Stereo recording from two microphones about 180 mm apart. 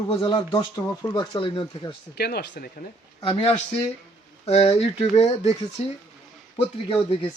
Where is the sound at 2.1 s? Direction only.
60° left (ahead or behind).